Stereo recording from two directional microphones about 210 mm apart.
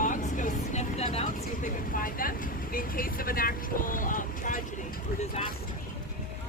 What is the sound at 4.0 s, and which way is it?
Boat, 40° left (ahead or behind).